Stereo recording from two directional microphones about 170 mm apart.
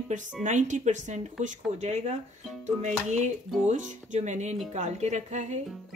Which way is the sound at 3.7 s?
45° right (ahead or behind).